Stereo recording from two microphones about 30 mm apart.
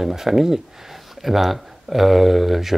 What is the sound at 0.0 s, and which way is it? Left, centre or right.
Speech, centre.